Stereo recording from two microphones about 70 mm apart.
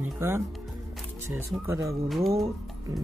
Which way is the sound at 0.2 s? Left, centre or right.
Right.